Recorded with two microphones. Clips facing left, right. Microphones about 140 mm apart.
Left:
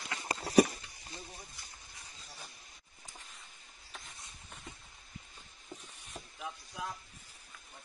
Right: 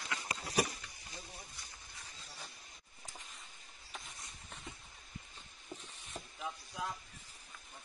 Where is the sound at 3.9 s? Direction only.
Centre (ahead or behind).